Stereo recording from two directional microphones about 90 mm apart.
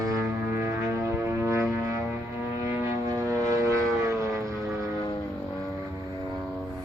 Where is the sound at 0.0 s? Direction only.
40° right (ahead or behind).